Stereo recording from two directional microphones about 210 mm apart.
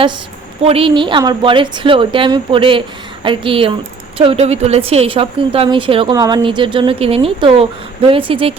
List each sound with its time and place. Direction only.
0.6 s a woman's voice: 25° right (ahead or behind)